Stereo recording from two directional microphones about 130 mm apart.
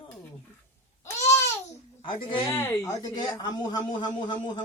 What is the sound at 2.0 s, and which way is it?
Speech, 40° left (ahead or behind).